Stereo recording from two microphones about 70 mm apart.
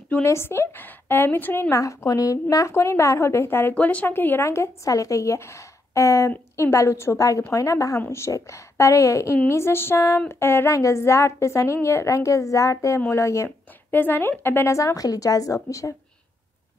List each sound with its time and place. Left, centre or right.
0.2 s a woman's voice: left
1.8 s a woman's voice: left
2.5 s a woman's voice: left
3.7 s speech: left
4.5 s a woman's voice: left
10.7 s a woman's voice: left
13.9 s a woman's voice: left
14.7 s a woman's voice: left